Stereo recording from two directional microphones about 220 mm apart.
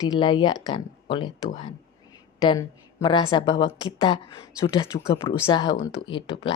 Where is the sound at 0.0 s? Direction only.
20° left (ahead or behind).